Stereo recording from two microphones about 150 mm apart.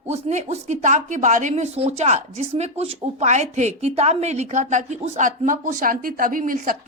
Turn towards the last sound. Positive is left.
turn(degrees=-65)  # may be behind; listen again after turning